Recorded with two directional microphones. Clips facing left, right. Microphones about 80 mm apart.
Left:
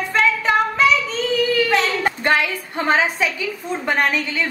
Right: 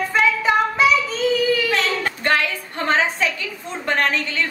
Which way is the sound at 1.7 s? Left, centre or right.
Centre.